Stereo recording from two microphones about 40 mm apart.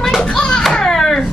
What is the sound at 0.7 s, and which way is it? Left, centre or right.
Baby cry, centre.